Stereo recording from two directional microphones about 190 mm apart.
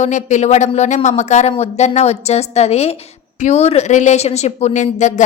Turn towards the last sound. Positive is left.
turn(degrees=40)  # may be behind; listen again after turning